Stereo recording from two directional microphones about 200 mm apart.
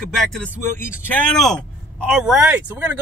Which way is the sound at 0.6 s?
10° left (ahead or behind).